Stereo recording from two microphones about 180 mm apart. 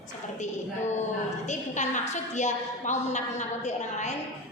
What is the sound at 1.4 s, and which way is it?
A woman's voice, 40° left (ahead or behind).